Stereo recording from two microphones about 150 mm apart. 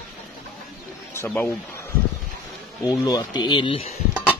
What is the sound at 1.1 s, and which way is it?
Speech, 15° left (ahead or behind).